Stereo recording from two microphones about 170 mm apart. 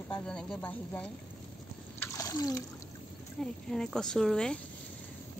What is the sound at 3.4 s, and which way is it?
Speech, 5° left (ahead or behind).